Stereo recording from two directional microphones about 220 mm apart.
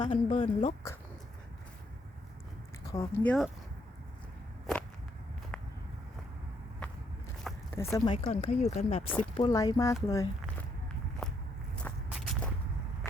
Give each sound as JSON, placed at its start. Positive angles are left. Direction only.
{"t": 0.1, "sound": "speech", "side_deg": 35}
{"t": 2.9, "sound": "speech", "side_deg": 15}
{"t": 7.4, "sound": "a sound", "side_deg": 0}
{"t": 7.9, "sound": "speech", "side_deg": 20}
{"t": 9.0, "sound": "speech", "side_deg": 5}
{"t": 11.2, "sound": "walk", "side_deg": 5}